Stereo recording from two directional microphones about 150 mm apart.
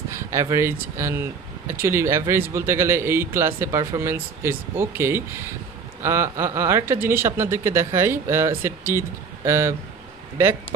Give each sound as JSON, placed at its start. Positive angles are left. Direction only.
{"t": 0.1, "sound": "speech", "side_deg": -20}